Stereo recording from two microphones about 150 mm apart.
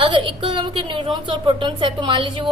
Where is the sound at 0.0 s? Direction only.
35° right (ahead or behind).